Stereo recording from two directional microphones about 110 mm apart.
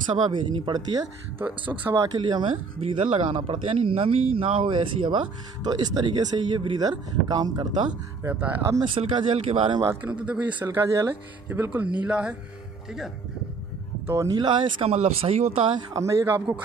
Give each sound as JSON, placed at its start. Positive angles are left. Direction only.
{"t": 0.1, "sound": "speech", "side_deg": -45}
{"t": 1.4, "sound": "speech", "side_deg": -15}
{"t": 2.1, "sound": "speech", "side_deg": -45}
{"t": 8.2, "sound": "speech", "side_deg": -15}
{"t": 8.8, "sound": "speech", "side_deg": -55}
{"t": 10.0, "sound": "speech", "side_deg": -10}
{"t": 14.2, "sound": "speech", "side_deg": -40}
{"t": 14.9, "sound": "speech", "side_deg": -65}
{"t": 15.9, "sound": "speech", "side_deg": -30}